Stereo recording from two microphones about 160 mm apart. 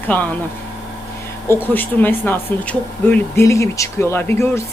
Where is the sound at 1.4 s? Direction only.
15° left (ahead or behind).